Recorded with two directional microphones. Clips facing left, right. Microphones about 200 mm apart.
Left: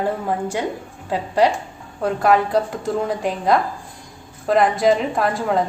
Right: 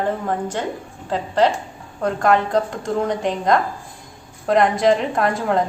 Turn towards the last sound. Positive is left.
turn(degrees=0)  # may be behind; listen again after turning